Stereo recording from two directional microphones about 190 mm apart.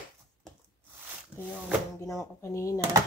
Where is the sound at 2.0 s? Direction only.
15° left (ahead or behind).